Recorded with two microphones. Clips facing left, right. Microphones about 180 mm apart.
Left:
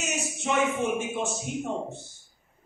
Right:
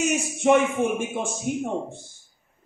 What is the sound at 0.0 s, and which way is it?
Speech, 55° right (ahead or behind).